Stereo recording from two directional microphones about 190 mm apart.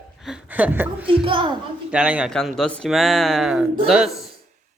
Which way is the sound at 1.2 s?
25° right (ahead or behind).